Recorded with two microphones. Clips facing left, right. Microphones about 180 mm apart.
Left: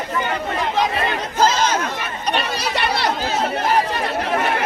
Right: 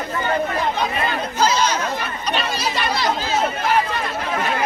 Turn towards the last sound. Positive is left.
turn(degrees=65)  # may be behind; listen again after turning